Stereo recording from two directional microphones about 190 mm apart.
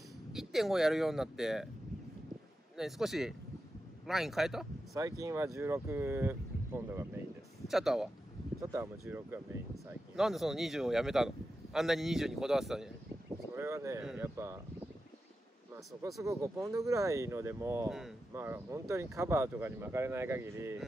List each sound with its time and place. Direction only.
0.3 s speech: centre (ahead or behind)
2.8 s speech: centre (ahead or behind)
4.9 s speech: 15° right (ahead or behind)
7.6 s speech: centre (ahead or behind)
8.7 s speech: 15° right (ahead or behind)
10.1 s speech: centre (ahead or behind)
13.6 s speech: 15° right (ahead or behind)
14.0 s speech: 5° right (ahead or behind)
16.2 s speech: 15° right (ahead or behind)